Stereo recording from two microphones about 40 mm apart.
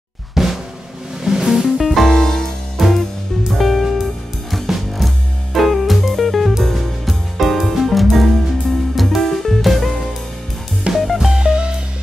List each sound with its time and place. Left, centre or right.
0.3 s drum: centre
1.2 s music: centre
1.8 s music: centre
2.8 s music: centre
11.3 s music: right